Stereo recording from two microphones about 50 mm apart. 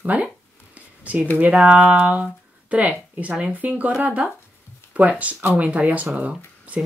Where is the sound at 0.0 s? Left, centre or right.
Right.